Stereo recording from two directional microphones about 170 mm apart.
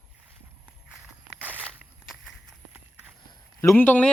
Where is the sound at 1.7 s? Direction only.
5° right (ahead or behind).